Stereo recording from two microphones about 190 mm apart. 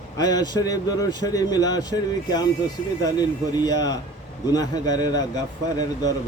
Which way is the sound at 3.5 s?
20° left (ahead or behind).